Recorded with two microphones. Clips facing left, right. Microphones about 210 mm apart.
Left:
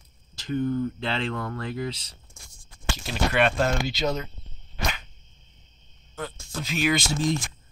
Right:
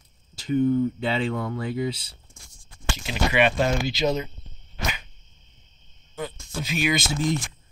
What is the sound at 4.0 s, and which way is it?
Speech, 15° right (ahead or behind).